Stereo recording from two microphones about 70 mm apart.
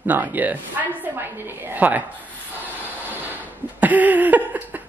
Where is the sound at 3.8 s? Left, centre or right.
Right.